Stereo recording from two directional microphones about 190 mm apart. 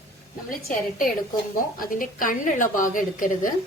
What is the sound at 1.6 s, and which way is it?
A woman's voice, 50° left (ahead or behind).